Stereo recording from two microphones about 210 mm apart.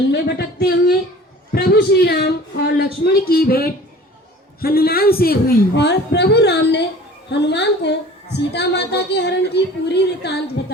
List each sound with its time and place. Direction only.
0.1 s a woman's voice: 50° left (ahead or behind)